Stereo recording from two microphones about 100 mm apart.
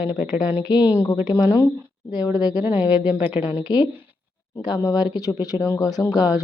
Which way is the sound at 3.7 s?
40° left (ahead or behind).